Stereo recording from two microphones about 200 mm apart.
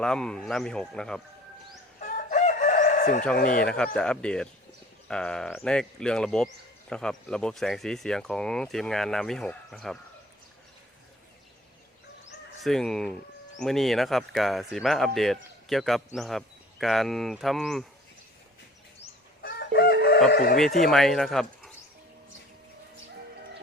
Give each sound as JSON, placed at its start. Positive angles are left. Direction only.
{"t": 0.0, "sound": "speech", "side_deg": 5}
{"t": 2.0, "sound": "chicken", "side_deg": 40}
{"t": 3.3, "sound": "speech", "side_deg": 45}
{"t": 3.9, "sound": "speech", "side_deg": 5}
{"t": 12.6, "sound": "speech", "side_deg": 0}
{"t": 19.4, "sound": "chicken", "side_deg": 55}
{"t": 20.3, "sound": "speech", "side_deg": 50}
{"t": 20.8, "sound": "speech", "side_deg": 0}